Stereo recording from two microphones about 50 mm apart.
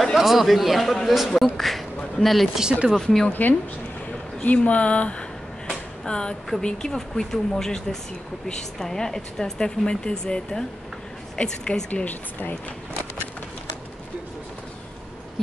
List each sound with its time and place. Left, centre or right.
0.0 s a man's voice: centre
3.3 s speech: left; by 11.8 s centre
11.9 s speech: left